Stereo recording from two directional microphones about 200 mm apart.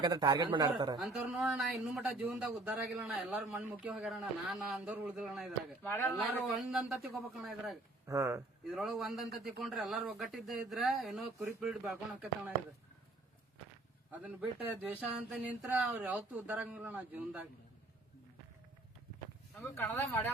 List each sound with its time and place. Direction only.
0.0 s a man's voice: 20° right (ahead or behind)
0.9 s speech: 5° right (ahead or behind)
5.9 s speech: 10° left (ahead or behind)
6.3 s speech: 5° right (ahead or behind)
8.0 s speech: 15° right (ahead or behind)
8.7 s speech: centre (ahead or behind)
14.1 s speech: 10° right (ahead or behind)
19.5 s speech: 10° left (ahead or behind)